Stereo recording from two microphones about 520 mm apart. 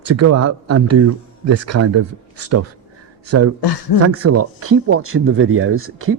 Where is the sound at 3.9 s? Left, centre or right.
Left.